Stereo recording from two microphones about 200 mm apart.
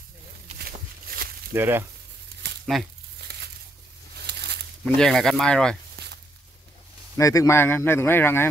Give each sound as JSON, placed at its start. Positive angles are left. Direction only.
{"t": 1.0, "sound": "a sound", "side_deg": -50}
{"t": 1.5, "sound": "frying", "side_deg": -10}
{"t": 2.6, "sound": "speech", "side_deg": 0}
{"t": 3.3, "sound": "crumpling", "side_deg": -55}
{"t": 4.3, "sound": "a sound", "side_deg": -55}
{"t": 4.8, "sound": "speech", "side_deg": 5}
{"t": 7.2, "sound": "speech", "side_deg": 15}